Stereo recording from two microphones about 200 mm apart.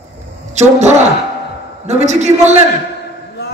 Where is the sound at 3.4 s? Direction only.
55° left (ahead or behind).